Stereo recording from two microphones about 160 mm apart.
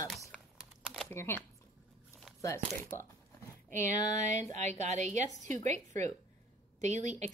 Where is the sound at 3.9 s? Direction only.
45° right (ahead or behind).